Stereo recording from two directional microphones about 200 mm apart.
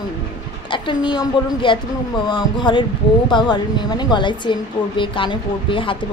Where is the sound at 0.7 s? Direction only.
25° left (ahead or behind).